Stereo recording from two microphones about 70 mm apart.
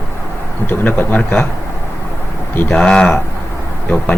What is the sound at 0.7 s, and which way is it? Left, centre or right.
Speech, left.